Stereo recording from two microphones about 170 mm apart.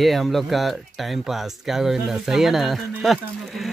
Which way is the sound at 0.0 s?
Centre (ahead or behind).